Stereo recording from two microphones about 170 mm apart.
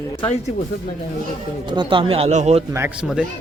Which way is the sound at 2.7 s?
10° right (ahead or behind).